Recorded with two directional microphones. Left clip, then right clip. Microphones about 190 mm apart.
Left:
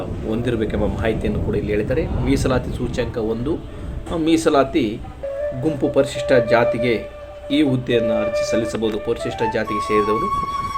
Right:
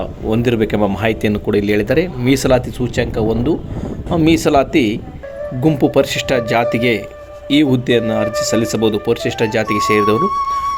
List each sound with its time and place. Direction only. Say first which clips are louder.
0.3 s a man's voice: right 6 dB; 45° right (ahead or behind)